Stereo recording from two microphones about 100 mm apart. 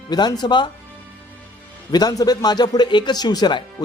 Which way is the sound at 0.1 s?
45° left (ahead or behind).